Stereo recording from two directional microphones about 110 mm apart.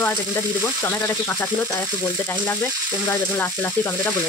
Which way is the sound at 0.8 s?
20° left (ahead or behind).